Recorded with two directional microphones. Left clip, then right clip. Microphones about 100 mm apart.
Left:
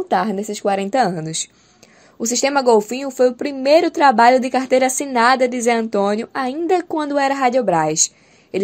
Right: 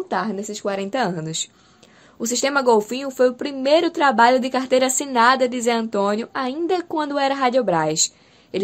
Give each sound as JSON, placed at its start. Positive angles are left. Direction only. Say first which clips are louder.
{"t": 0.1, "sound": "a woman's voice", "louder": "left 6 dB", "side_deg": 80}